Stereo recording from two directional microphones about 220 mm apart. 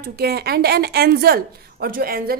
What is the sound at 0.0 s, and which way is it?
A woman's voice, 45° right (ahead or behind).